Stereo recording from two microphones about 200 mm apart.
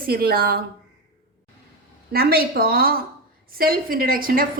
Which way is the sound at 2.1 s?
50° right (ahead or behind).